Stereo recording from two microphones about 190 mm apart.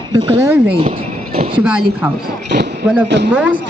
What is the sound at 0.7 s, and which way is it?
Speech, 30° right (ahead or behind).